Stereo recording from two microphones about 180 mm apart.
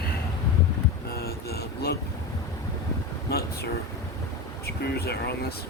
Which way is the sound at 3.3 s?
60° left (ahead or behind).